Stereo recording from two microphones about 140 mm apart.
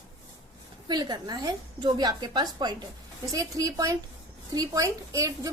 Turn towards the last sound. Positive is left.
turn(degrees=-25)  # may be behind; listen again after turning